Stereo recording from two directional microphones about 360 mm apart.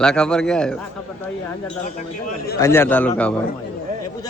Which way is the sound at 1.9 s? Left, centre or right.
Left.